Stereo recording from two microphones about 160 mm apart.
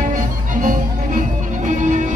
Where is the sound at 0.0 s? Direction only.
55° right (ahead or behind).